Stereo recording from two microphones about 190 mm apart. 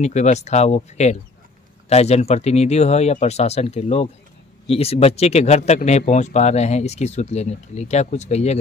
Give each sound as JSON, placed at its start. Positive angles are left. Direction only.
{"t": 0.0, "sound": "speech", "side_deg": 35}